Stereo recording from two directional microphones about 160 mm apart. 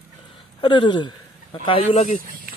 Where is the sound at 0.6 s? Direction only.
30° left (ahead or behind).